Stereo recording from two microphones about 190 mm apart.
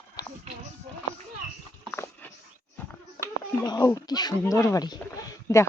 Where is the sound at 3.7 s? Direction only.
20° left (ahead or behind).